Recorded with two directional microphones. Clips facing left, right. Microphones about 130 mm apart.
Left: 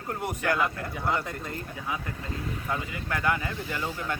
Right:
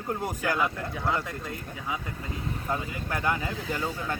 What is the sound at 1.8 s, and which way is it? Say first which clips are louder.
Speech: right 1 dB; 15° right (ahead or behind).